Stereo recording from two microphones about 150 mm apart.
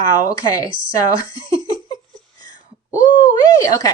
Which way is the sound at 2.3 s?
25° left (ahead or behind).